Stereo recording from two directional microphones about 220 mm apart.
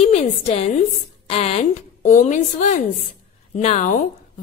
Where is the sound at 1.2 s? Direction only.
30° left (ahead or behind).